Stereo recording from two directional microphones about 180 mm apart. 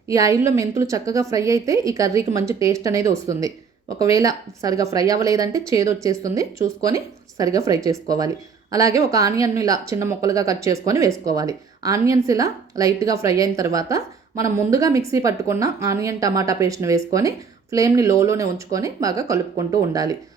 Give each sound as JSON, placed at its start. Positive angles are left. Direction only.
{"t": 0.1, "sound": "a woman's voice", "side_deg": -15}